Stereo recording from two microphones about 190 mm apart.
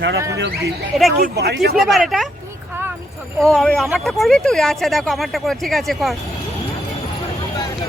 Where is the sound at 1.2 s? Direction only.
55° right (ahead or behind).